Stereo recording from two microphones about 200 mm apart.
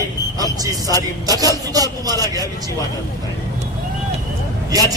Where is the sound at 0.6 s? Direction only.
15° right (ahead or behind).